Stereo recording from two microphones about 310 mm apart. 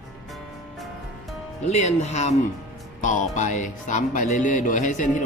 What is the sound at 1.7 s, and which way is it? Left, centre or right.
Speech, left.